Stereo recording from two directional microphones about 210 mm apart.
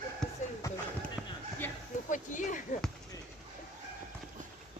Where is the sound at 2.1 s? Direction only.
35° left (ahead or behind).